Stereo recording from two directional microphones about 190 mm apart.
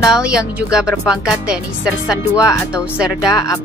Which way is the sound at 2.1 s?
20° left (ahead or behind).